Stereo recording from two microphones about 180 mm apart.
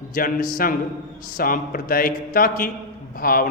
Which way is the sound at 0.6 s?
55° left (ahead or behind).